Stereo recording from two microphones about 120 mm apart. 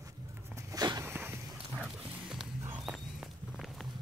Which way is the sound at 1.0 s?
15° right (ahead or behind).